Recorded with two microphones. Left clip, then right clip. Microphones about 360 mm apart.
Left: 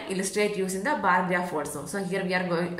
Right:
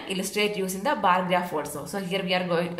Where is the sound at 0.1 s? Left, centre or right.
Centre.